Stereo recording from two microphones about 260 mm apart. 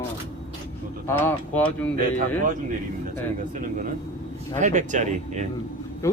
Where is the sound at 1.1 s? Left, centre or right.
Centre.